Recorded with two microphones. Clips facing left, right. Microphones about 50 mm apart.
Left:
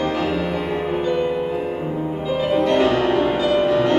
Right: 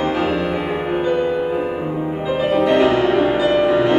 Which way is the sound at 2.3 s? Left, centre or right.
Centre.